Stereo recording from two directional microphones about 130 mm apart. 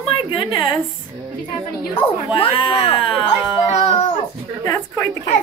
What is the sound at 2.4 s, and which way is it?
Speech, 45° left (ahead or behind).